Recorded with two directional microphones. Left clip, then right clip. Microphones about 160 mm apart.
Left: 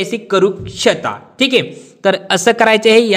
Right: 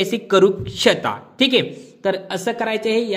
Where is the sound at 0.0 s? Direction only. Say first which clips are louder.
Left 1 dB; centre (ahead or behind).